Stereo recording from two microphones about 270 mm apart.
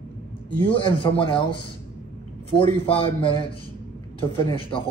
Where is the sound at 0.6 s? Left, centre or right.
Centre.